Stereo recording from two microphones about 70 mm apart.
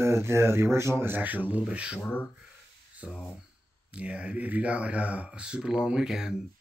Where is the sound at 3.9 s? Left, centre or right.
Centre.